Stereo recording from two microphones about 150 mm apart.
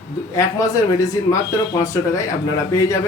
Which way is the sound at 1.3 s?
25° left (ahead or behind).